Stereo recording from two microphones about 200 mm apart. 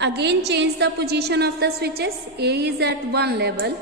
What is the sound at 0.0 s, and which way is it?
A woman's voice, 60° right (ahead or behind).